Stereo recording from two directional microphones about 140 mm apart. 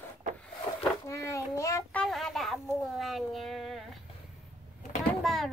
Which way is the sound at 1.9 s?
5° left (ahead or behind).